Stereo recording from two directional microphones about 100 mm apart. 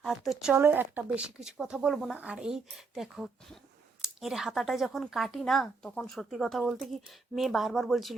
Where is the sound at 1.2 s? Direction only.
5° right (ahead or behind).